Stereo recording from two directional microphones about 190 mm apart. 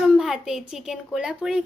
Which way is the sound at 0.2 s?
Centre (ahead or behind).